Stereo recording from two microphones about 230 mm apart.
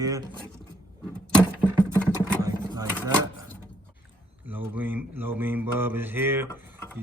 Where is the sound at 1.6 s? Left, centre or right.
Centre.